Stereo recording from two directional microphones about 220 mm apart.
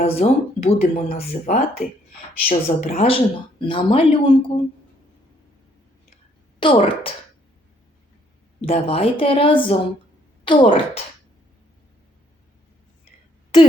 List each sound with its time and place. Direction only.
0.0 s speech: 25° left (ahead or behind)
6.6 s speech: 25° left (ahead or behind)
8.6 s speech: 25° left (ahead or behind)